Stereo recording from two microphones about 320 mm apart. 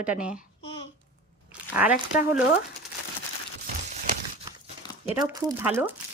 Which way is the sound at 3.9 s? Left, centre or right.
Right.